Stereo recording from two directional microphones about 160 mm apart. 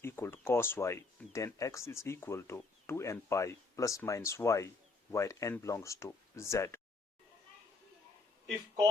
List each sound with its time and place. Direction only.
0.0 s speech: 15° left (ahead or behind)